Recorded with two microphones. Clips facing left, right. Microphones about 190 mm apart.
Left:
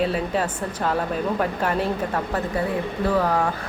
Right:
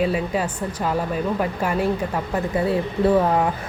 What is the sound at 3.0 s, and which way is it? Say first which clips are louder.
Speech: right 3 dB; 25° right (ahead or behind).